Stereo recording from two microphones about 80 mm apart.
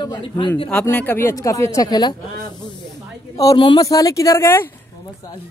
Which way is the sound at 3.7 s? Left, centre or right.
Left.